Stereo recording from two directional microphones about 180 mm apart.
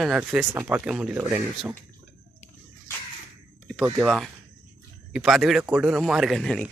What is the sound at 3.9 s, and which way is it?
Speech, centre (ahead or behind).